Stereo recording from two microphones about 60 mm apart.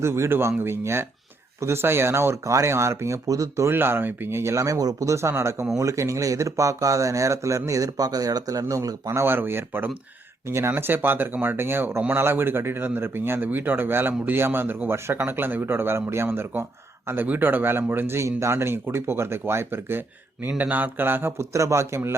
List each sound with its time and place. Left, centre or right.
0.0 s speech: right
2.4 s speech: right
3.2 s speech: right
3.7 s speech: right
5.3 s speech: right
9.2 s speech: right
10.4 s speech: right
10.7 s speech: right
17.2 s speech: right
18.3 s speech: right
21.5 s speech: right